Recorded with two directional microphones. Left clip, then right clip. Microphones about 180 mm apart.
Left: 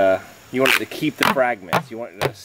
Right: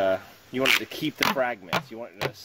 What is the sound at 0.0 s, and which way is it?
Speech, 30° right (ahead or behind).